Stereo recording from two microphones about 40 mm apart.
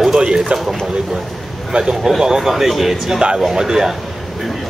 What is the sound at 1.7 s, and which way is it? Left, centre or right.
Speech, centre.